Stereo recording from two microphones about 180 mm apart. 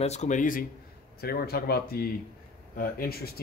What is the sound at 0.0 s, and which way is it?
Speech, 40° left (ahead or behind).